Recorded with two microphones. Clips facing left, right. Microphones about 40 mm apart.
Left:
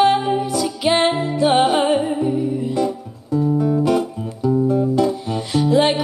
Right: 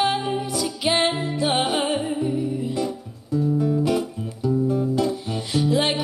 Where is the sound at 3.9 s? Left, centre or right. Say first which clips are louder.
Left 5 dB; centre.